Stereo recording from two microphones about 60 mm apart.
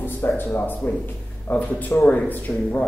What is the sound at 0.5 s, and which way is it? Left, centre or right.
A man's voice, left.